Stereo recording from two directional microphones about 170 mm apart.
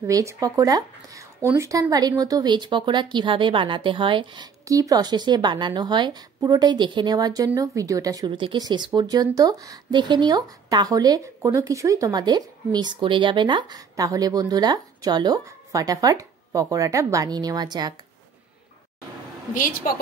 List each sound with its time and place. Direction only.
0.0 s speech: 15° right (ahead or behind)
19.5 s a woman's voice: 50° left (ahead or behind)